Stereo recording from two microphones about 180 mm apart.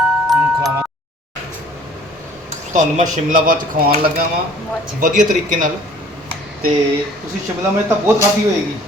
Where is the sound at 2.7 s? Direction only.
45° right (ahead or behind).